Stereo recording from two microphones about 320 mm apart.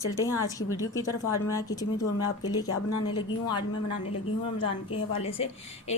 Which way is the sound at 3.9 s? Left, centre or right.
Left.